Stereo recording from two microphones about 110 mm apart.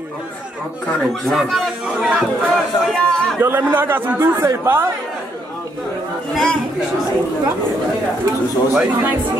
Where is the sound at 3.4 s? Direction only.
20° right (ahead or behind).